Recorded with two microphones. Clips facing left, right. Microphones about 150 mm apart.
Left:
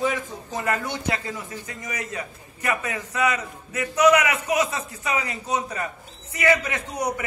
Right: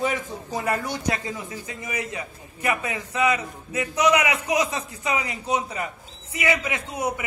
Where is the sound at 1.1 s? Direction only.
20° right (ahead or behind).